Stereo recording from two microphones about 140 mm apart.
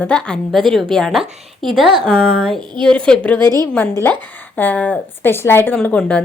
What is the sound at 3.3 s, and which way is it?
Speech, 30° right (ahead or behind).